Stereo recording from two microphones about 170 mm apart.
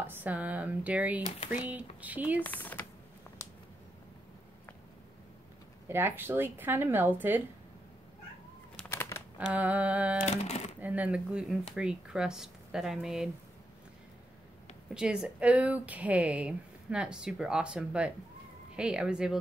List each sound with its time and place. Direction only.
0.0 s speech: 10° right (ahead or behind)
2.4 s speech: 10° left (ahead or behind)
5.9 s speech: 15° right (ahead or behind)
8.7 s a sound: 10° left (ahead or behind)
9.5 s speech: 10° right (ahead or behind)
10.2 s speech: 40° left (ahead or behind)
10.8 s speech: 10° right (ahead or behind)
15.0 s speech: 5° right (ahead or behind)